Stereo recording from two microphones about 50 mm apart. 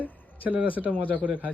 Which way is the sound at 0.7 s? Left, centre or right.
Right.